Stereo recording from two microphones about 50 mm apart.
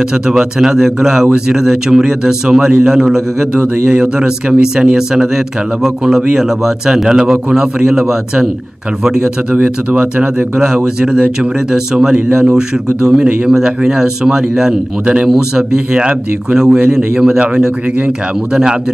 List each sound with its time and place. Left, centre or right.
0.1 s speech: centre
9.5 s speech: right